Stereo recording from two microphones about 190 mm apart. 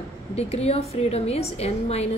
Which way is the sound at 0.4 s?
35° left (ahead or behind).